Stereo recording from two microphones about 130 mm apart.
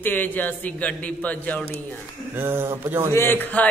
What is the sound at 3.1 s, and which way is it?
Speech, 15° left (ahead or behind).